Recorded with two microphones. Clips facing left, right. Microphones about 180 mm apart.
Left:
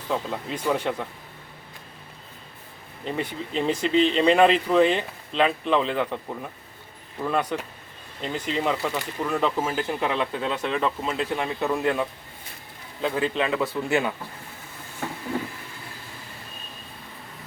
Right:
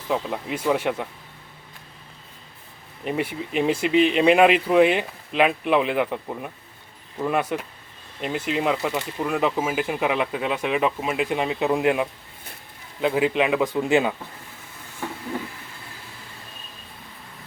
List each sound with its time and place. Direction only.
0.1 s speech: 5° right (ahead or behind)
3.0 s speech: 10° right (ahead or behind)